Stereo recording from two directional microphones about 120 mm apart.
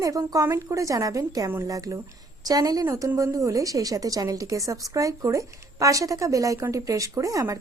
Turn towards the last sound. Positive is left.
turn(degrees=-30)  # may be behind; listen again after turning